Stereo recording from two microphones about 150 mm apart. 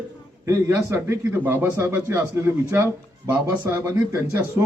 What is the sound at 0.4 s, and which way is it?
Speech, 20° right (ahead or behind).